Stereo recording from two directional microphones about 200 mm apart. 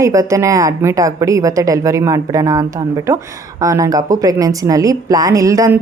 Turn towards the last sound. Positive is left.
turn(degrees=-15)  # may be behind; listen again after turning